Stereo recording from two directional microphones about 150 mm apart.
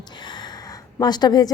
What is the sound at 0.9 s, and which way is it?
Speech, 30° left (ahead or behind).